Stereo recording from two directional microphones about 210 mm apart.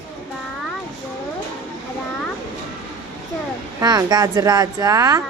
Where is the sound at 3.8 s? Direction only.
20° right (ahead or behind).